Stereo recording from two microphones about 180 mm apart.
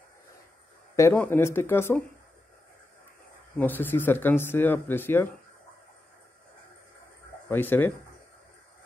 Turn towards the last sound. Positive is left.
turn(degrees=10)  # may be behind; listen again after turning